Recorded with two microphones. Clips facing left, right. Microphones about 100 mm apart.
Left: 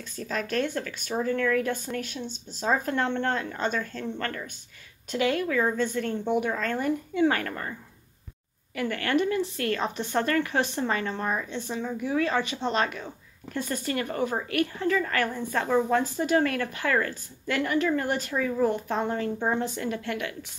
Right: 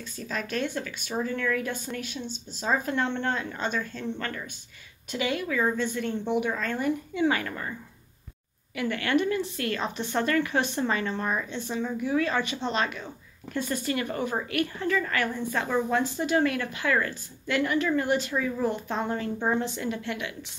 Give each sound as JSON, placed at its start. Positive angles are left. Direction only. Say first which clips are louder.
{"t": 0.3, "sound": "speech", "louder": "left 2 dB", "side_deg": 50}
{"t": 8.7, "sound": "a woman's voice", "louder": "even", "side_deg": 40}